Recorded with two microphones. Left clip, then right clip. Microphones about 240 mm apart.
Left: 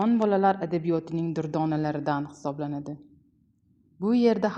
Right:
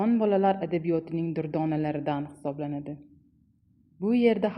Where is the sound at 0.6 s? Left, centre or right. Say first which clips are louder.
Even; left.